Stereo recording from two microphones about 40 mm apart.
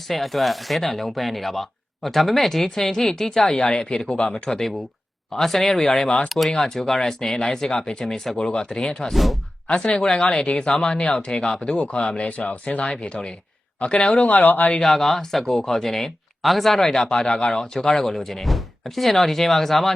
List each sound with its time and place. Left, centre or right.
0.1 s speech: centre; by 4.4 s left
4.4 s speech: centre
9.1 s speech: centre
9.6 s speech: left
12.1 s speech: left
14.3 s speech: left
14.8 s speech: centre